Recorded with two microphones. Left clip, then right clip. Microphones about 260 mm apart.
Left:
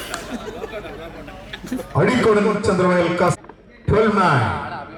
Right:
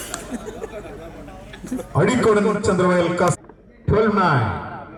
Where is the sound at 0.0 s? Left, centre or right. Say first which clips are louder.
Left 2 dB; centre.